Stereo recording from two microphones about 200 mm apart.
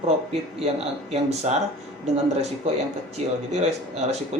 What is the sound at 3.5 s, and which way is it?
Speech, 35° right (ahead or behind).